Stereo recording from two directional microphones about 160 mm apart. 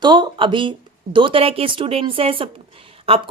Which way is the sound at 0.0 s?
25° right (ahead or behind).